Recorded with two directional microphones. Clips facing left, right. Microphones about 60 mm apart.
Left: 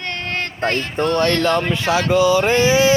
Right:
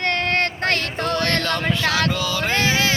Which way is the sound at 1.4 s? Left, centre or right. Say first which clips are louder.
Left 4 dB; left.